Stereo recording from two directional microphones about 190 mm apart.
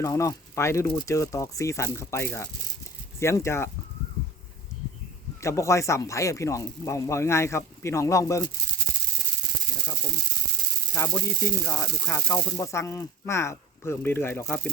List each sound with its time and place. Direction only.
0.0 s speech: 15° left (ahead or behind)
5.4 s speech: 15° left (ahead or behind)
10.9 s speech: 10° left (ahead or behind)